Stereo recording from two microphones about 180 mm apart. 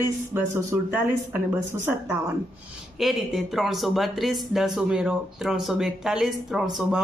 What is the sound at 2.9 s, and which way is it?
Speech, centre (ahead or behind).